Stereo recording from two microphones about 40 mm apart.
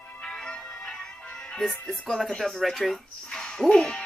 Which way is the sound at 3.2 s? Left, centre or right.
Left.